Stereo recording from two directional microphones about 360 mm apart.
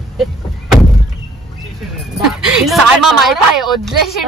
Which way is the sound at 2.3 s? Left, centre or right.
Centre.